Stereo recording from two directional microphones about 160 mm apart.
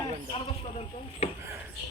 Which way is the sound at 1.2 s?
40° left (ahead or behind).